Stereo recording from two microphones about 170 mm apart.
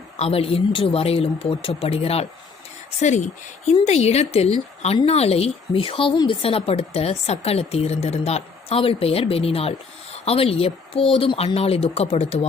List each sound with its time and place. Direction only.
0.2 s a woman's voice: 35° left (ahead or behind)